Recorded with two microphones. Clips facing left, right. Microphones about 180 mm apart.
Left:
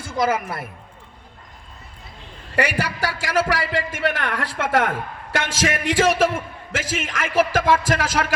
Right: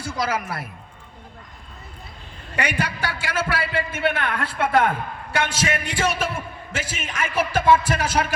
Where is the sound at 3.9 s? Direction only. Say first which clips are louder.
Even; 90° left.